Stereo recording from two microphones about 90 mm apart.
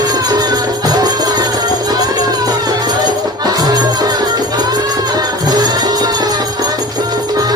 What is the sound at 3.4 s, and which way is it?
Music, 50° right (ahead or behind).